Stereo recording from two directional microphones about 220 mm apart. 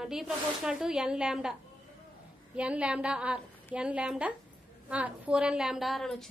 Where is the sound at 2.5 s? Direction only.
5° right (ahead or behind).